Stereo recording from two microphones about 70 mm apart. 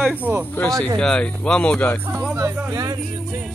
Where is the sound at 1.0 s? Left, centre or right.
Centre.